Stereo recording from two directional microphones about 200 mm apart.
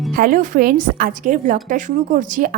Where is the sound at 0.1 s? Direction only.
45° right (ahead or behind).